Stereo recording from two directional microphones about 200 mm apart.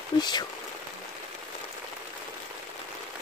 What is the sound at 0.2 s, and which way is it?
Speech, 20° left (ahead or behind).